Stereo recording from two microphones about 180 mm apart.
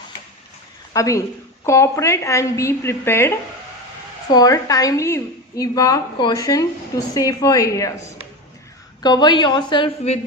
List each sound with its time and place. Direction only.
0.9 s a woman's voice: 15° left (ahead or behind)